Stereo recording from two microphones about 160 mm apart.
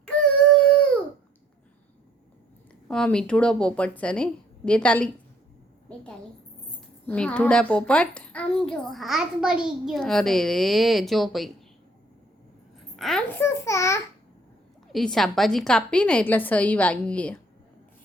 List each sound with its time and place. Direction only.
2.9 s a woman's voice: 5° left (ahead or behind)
7.1 s a child's voice: 5° left (ahead or behind)
13.0 s a child's voice: centre (ahead or behind)
13.4 s a woman's voice: 20° left (ahead or behind)
14.9 s a woman's voice: centre (ahead or behind)